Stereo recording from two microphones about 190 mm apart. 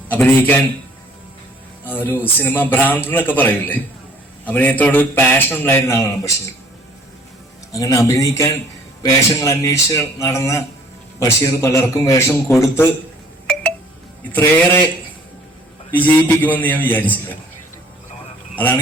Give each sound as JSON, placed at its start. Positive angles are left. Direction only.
{"t": 0.1, "sound": "a man's voice", "side_deg": 10}
{"t": 1.9, "sound": "a man's voice", "side_deg": 10}
{"t": 7.7, "sound": "a man's voice", "side_deg": 20}
{"t": 13.5, "sound": "telephone dialing", "side_deg": 5}
{"t": 14.3, "sound": "a man's voice", "side_deg": 10}
{"t": 16.0, "sound": "a man's voice", "side_deg": 10}
{"t": 18.5, "sound": "speech", "side_deg": 10}